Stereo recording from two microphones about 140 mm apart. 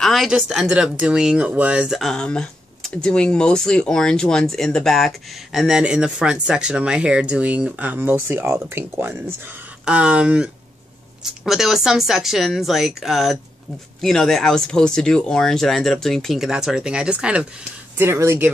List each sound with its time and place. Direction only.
0.0 s speech: centre (ahead or behind); by 18.5 s 20° right (ahead or behind)